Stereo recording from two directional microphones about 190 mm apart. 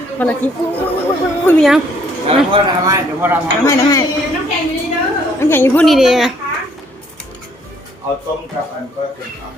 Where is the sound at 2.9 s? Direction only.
10° right (ahead or behind).